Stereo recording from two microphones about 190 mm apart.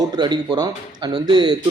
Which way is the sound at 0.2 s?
25° right (ahead or behind).